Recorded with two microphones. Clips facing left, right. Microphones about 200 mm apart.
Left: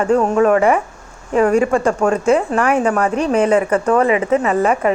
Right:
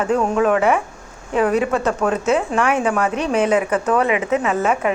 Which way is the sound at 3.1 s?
35° left (ahead or behind).